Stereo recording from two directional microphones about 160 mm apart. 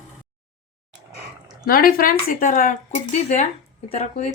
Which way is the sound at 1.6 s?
65° left (ahead or behind).